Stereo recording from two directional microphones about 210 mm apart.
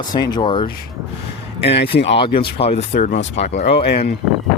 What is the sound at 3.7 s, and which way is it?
Speech, 50° left (ahead or behind).